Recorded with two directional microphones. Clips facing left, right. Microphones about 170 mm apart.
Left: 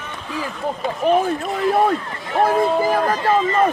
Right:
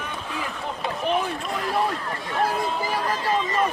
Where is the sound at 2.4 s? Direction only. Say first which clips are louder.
Left 9 dB; 50° left (ahead or behind).